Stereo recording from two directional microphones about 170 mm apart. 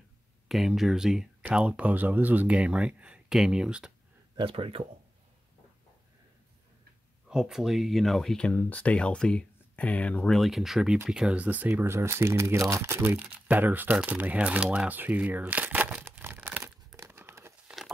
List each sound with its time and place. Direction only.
0.5 s speech: centre (ahead or behind)
4.4 s speech: 30° right (ahead or behind)
7.2 s speech: 5° right (ahead or behind)
17.6 s patter: centre (ahead or behind)